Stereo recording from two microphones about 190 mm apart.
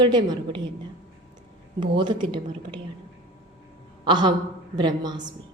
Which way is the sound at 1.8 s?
25° right (ahead or behind).